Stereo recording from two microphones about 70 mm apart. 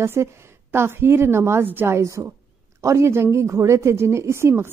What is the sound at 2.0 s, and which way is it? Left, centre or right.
A woman's voice, right.